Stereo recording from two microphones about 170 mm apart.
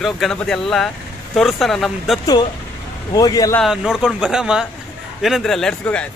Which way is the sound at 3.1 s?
20° left (ahead or behind).